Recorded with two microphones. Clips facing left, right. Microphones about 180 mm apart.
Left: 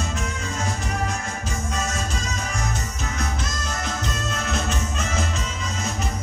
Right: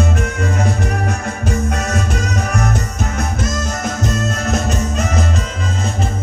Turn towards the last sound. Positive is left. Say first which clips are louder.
# right 7 dB
turn(degrees=-40)  # may be behind; listen again after turning